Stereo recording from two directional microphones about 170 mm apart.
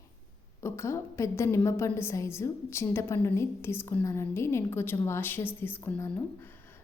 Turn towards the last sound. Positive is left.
turn(degrees=15)  # may be behind; listen again after turning